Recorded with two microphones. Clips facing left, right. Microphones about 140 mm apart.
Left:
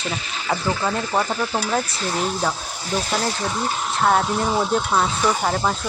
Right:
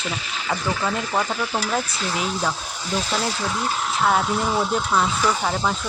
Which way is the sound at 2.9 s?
10° left (ahead or behind).